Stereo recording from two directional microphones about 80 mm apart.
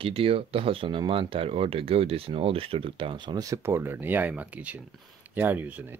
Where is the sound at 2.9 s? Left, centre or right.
Right.